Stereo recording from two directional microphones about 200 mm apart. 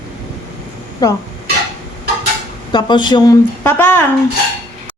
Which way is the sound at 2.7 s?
20° left (ahead or behind).